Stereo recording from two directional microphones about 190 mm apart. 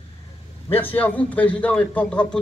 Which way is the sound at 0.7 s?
10° left (ahead or behind).